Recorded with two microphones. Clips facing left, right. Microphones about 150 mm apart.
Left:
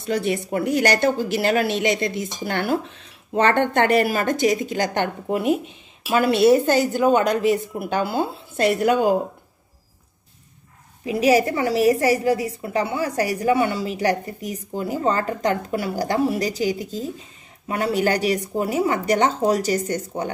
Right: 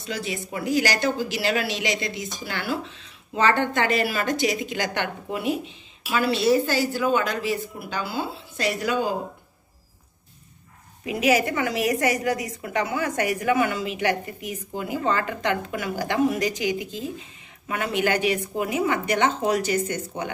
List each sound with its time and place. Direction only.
0.0 s a woman's voice: 55° left (ahead or behind)
11.1 s a woman's voice: 35° left (ahead or behind)